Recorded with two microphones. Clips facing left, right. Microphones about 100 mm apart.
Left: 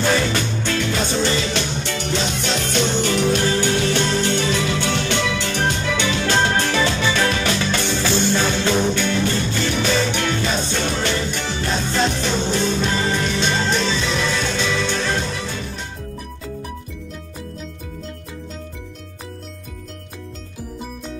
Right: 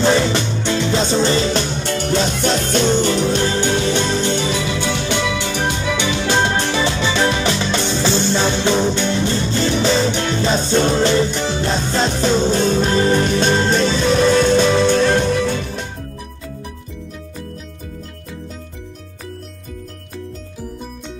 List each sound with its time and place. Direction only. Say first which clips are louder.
0.0 s music: right 4 dB; 25° right (ahead or behind)
1.8 s music: right 5 dB; 45° right (ahead or behind)